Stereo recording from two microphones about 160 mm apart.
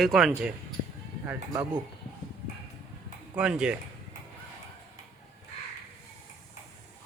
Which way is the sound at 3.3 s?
5° right (ahead or behind).